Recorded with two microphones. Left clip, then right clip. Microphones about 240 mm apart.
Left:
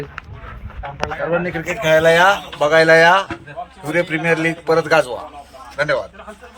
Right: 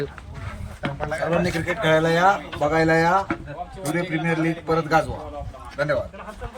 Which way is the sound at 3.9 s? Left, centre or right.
Centre.